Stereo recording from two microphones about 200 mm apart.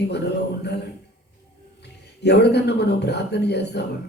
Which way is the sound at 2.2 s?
55° left (ahead or behind).